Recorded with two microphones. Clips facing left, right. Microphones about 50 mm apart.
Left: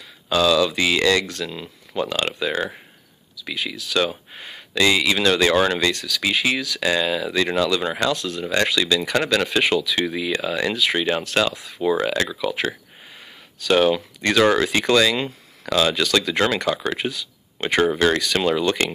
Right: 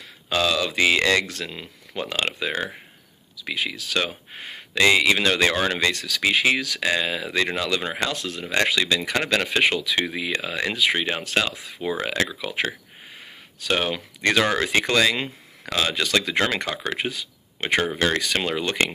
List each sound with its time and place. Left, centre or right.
0.3 s speech: right
4.3 s speech: right
5.9 s speech: right
6.8 s speech: right
8.2 s speech: right
13.7 s speech: right